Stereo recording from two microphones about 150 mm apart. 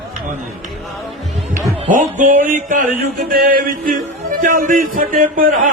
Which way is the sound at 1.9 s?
60° right (ahead or behind).